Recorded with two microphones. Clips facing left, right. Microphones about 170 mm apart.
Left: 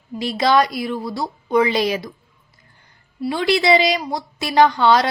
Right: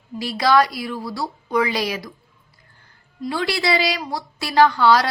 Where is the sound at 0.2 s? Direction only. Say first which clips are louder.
Left 1 dB; 20° left (ahead or behind).